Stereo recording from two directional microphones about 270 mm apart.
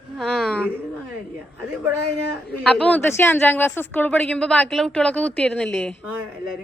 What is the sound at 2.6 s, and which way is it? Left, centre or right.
A woman's voice, centre.